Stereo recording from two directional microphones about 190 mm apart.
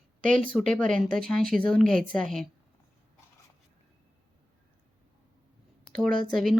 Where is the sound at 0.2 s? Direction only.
45° right (ahead or behind).